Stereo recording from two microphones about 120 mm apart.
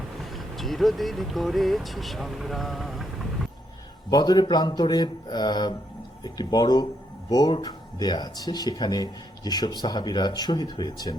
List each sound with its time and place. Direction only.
0.2 s speech: centre (ahead or behind)
4.1 s speech: 35° left (ahead or behind)